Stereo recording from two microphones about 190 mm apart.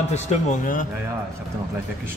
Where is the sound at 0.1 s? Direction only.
40° left (ahead or behind).